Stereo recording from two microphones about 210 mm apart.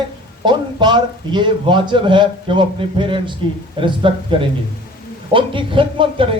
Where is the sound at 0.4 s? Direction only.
20° right (ahead or behind).